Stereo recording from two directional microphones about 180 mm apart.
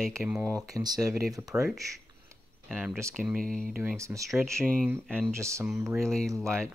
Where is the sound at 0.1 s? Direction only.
10° right (ahead or behind).